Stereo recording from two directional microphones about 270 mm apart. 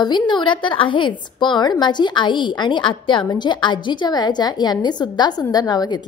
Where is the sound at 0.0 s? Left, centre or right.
Centre.